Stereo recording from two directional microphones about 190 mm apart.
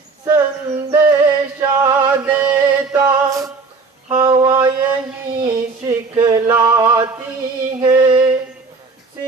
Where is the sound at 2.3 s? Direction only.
10° right (ahead or behind).